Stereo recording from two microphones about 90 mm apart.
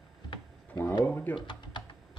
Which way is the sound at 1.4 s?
55° left (ahead or behind).